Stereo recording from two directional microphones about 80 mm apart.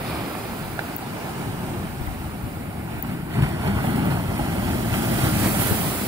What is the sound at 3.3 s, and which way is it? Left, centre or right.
Vehicle, right.